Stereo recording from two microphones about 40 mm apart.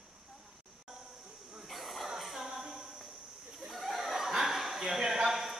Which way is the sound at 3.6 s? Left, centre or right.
Centre.